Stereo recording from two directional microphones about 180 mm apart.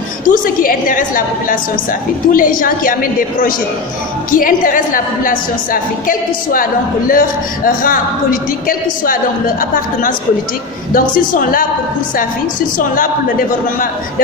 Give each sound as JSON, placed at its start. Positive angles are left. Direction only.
{"t": 0.3, "sound": "a woman's voice", "side_deg": 50}
{"t": 12.7, "sound": "a woman's voice", "side_deg": 50}